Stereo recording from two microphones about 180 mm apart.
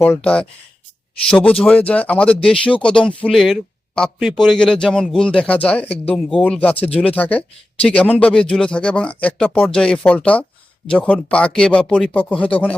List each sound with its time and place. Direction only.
0.0 s speech: 5° left (ahead or behind)